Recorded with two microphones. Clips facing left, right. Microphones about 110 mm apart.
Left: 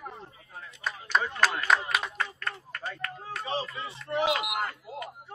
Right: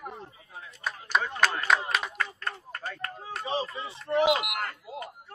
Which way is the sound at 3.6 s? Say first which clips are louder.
Right 2 dB; 30° right (ahead or behind).